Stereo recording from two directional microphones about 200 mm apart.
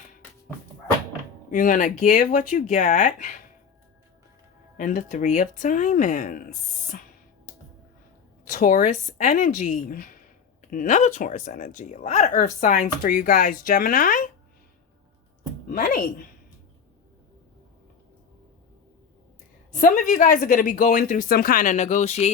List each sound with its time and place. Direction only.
1.5 s speech: 40° left (ahead or behind)
4.8 s speech: 40° left (ahead or behind)
7.5 s music: 40° left (ahead or behind)
8.4 s speech: 40° left (ahead or behind)
15.7 s speech: 45° left (ahead or behind)
19.7 s speech: 40° left (ahead or behind)